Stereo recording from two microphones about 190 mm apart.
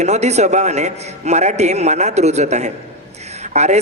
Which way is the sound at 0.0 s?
35° right (ahead or behind).